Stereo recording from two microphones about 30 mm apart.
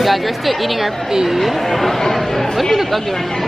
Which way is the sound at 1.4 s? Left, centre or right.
Centre.